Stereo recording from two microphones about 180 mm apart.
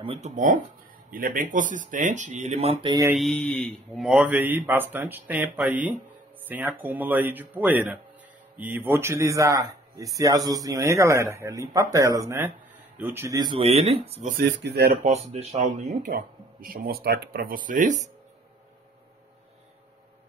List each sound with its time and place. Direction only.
0.0 s speech: 30° right (ahead or behind)
1.1 s speech: 50° right (ahead or behind); by 2.9 s 35° right (ahead or behind)
2.9 s speech: 15° right (ahead or behind)
3.2 s a man's voice: 5° left (ahead or behind); by 14.3 s 35° right (ahead or behind)
14.3 s speech: 65° right (ahead or behind)
15.0 s speech: 35° right (ahead or behind)